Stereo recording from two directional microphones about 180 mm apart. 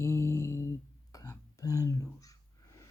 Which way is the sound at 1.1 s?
20° left (ahead or behind).